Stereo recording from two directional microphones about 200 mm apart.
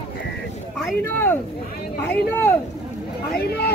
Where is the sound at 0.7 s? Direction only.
5° left (ahead or behind).